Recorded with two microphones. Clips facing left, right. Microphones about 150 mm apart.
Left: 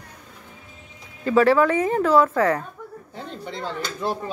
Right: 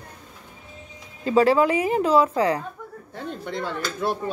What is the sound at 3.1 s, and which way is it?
Speech, 55° right (ahead or behind).